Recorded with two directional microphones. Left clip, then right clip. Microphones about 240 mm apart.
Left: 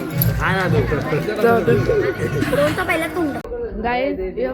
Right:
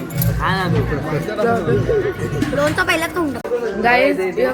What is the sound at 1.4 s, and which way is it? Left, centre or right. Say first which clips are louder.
Speech: left 3 dB; centre.